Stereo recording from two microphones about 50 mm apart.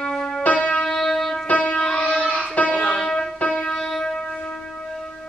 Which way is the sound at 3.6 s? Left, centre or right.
Centre.